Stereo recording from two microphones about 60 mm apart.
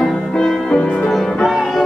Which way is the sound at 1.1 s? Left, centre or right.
Centre.